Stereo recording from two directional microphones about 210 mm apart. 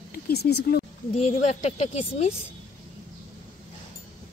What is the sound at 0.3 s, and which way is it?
Speech, 50° left (ahead or behind).